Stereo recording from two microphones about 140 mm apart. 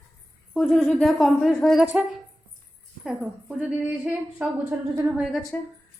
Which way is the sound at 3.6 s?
10° right (ahead or behind).